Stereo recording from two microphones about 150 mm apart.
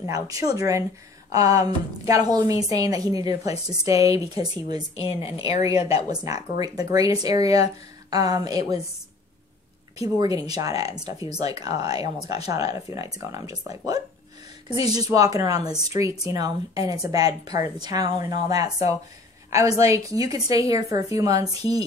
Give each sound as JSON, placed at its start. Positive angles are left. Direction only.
{"t": 0.0, "sound": "a woman's voice", "side_deg": -25}
{"t": 4.9, "sound": "a woman's voice", "side_deg": 40}
{"t": 6.0, "sound": "a woman's voice", "side_deg": -25}
{"t": 9.9, "sound": "a woman's voice", "side_deg": -25}